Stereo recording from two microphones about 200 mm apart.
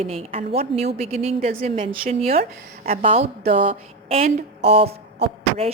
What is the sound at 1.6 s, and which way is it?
A woman's voice, 25° right (ahead or behind).